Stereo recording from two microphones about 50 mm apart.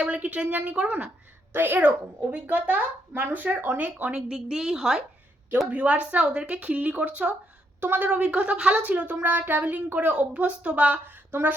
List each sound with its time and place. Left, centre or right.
0.0 s speech: right
1.5 s a woman's voice: right
2.3 s speech: right
4.1 s a woman's voice: centre
5.7 s speech: right
7.8 s speech: right
8.1 s speech: right
9.2 s speech: right
11.0 s a woman's voice: right